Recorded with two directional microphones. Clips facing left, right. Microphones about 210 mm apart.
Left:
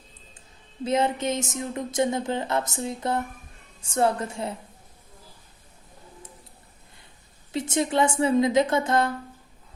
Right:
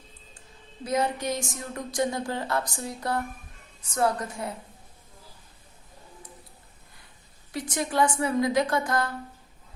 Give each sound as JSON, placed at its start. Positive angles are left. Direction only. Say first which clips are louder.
{"t": 0.9, "sound": "speech", "louder": "left 3 dB", "side_deg": 25}
{"t": 7.5, "sound": "speech", "louder": "left 4 dB", "side_deg": 25}